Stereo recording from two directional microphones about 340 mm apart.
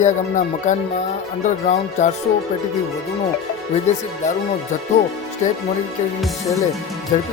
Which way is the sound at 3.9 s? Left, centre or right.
Left.